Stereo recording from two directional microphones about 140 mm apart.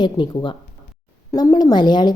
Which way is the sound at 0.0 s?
35° left (ahead or behind).